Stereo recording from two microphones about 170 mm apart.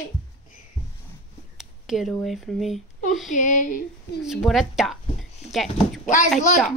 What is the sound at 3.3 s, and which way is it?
Speech, 50° left (ahead or behind).